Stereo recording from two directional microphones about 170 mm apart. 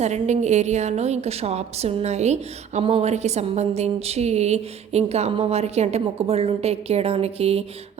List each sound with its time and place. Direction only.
0.0 s a woman's voice: 40° right (ahead or behind)